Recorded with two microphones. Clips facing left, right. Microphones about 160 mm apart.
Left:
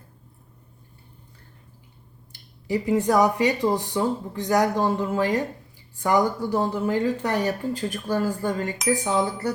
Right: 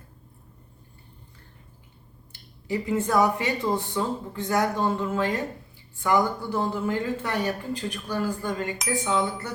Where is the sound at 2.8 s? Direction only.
35° left (ahead or behind).